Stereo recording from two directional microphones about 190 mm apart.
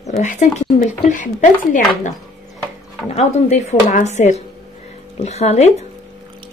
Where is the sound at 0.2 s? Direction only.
40° left (ahead or behind).